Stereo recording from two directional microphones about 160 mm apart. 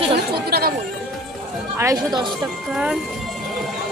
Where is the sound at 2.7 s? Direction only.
5° right (ahead or behind).